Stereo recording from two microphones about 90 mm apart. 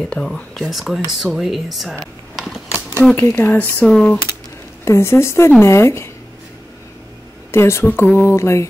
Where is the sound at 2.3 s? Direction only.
5° right (ahead or behind).